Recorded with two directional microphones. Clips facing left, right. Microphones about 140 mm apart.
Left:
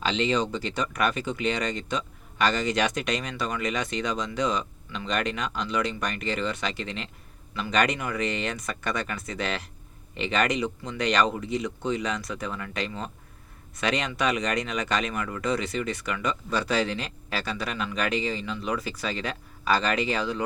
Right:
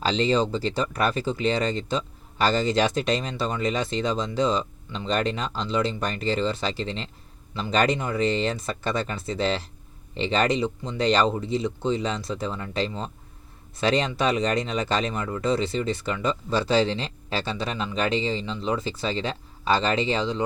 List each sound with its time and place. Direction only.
0.0 s speech: 35° right (ahead or behind)